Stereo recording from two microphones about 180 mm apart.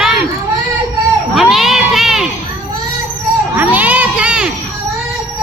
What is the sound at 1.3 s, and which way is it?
Children playing, centre (ahead or behind).